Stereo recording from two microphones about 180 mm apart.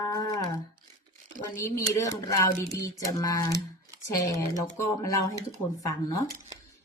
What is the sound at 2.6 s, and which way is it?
Speech, 15° left (ahead or behind).